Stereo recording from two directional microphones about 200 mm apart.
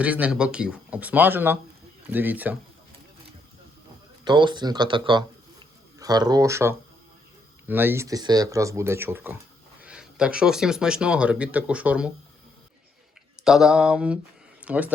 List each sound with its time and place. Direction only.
0.0 s speech: 5° right (ahead or behind)
4.2 s speech: 25° right (ahead or behind); by 12.1 s 5° right (ahead or behind)
13.4 s speech: centre (ahead or behind)